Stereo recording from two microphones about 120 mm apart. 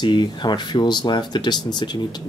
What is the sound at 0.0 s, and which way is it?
Speech, 40° left (ahead or behind).